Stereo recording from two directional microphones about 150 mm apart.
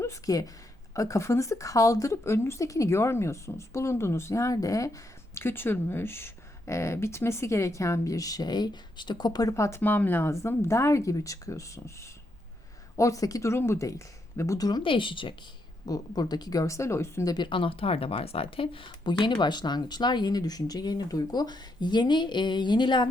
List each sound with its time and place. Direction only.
0.0 s a woman's voice: 20° left (ahead or behind)
17.3 s speech: 30° left (ahead or behind)